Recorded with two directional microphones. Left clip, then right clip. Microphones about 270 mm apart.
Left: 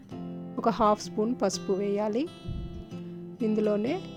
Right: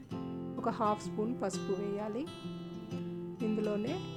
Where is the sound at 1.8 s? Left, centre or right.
Left.